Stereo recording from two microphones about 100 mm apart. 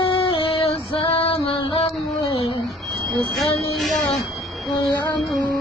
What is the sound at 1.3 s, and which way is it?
Female singing, 80° left.